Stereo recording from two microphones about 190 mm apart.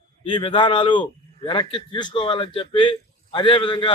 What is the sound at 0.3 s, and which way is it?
A man's voice, 25° left (ahead or behind).